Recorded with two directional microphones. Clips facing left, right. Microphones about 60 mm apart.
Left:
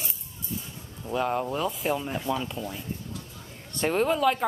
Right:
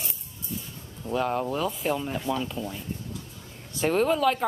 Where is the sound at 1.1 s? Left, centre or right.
Centre.